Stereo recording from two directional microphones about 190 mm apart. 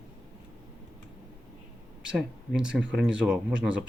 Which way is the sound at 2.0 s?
5° right (ahead or behind).